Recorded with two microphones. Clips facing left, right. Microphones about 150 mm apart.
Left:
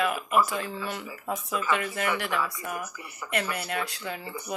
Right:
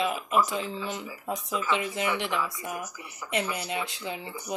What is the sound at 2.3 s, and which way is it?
Speech, centre (ahead or behind).